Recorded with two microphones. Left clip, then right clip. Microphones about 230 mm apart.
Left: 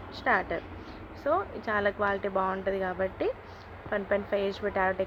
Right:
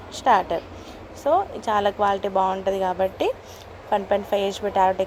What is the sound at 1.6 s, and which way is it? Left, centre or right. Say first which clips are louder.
Speech: right 7 dB; centre.